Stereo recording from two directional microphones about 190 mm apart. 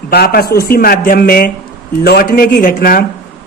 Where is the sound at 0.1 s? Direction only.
55° left (ahead or behind).